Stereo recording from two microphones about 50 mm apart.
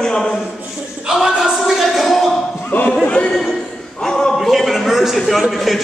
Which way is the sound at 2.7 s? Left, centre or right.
Left.